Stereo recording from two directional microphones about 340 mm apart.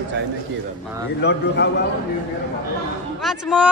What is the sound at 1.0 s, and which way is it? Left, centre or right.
Speech, left.